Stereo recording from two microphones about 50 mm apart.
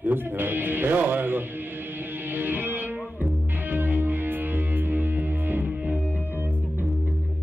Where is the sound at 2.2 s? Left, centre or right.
Right.